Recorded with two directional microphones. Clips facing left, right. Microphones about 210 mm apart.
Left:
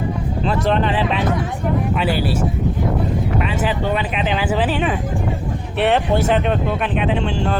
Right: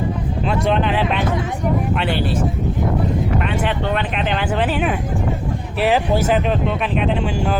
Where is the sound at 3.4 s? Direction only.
5° left (ahead or behind).